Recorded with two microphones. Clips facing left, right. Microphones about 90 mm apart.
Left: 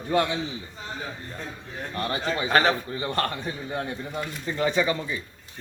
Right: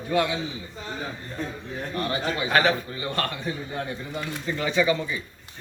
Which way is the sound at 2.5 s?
35° left (ahead or behind).